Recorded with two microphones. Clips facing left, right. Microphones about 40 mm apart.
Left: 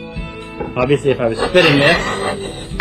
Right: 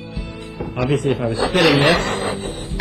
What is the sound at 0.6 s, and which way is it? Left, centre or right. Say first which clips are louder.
A man's voice: left 5 dB; left.